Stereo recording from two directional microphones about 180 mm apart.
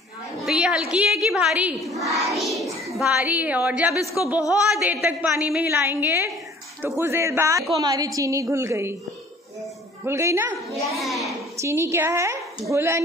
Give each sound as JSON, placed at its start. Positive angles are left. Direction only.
{"t": 0.5, "sound": "a woman's voice", "side_deg": -5}
{"t": 10.0, "sound": "a woman's voice", "side_deg": -15}
{"t": 10.8, "sound": "a child's voice", "side_deg": 0}
{"t": 11.6, "sound": "a woman's voice", "side_deg": -15}